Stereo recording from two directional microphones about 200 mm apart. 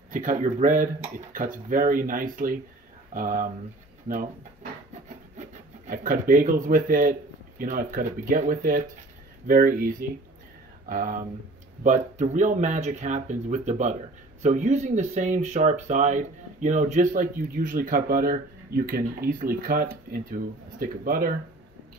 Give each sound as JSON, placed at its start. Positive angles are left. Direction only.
{"t": 0.1, "sound": "speech", "side_deg": -40}
{"t": 5.5, "sound": "speech", "side_deg": -40}